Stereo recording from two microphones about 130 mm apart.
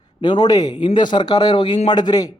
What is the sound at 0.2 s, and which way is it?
A man's voice, 35° left (ahead or behind).